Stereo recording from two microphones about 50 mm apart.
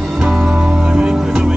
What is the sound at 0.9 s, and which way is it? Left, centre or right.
Music, centre.